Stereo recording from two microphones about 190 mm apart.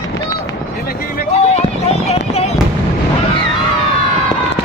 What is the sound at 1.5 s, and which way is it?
Run, 35° left (ahead or behind).